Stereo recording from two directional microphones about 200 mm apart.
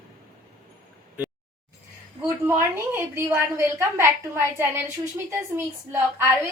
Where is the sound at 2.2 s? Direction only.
10° right (ahead or behind).